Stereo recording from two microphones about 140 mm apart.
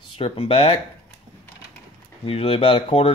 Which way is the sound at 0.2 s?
40° left (ahead or behind).